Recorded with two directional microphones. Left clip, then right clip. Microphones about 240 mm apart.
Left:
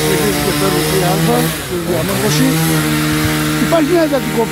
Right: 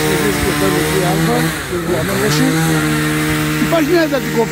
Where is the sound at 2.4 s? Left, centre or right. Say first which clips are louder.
Even; left.